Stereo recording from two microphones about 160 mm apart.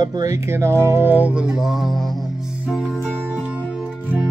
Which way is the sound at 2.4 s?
Centre (ahead or behind).